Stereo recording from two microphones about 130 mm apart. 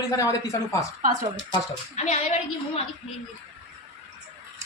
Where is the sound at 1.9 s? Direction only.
55° left (ahead or behind).